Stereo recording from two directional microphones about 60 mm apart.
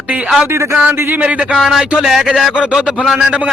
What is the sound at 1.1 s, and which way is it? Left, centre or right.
Speech, right.